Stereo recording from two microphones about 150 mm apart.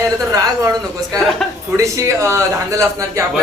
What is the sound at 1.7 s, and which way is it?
A man's voice, 20° right (ahead or behind).